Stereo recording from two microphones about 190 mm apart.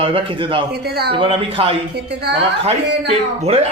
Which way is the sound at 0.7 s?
55° right (ahead or behind).